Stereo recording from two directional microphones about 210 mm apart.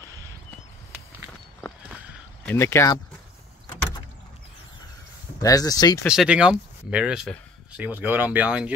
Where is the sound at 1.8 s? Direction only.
5° right (ahead or behind).